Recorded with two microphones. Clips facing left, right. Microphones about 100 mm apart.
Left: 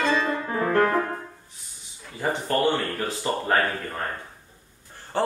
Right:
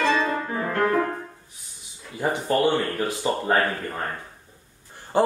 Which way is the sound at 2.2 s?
15° right (ahead or behind).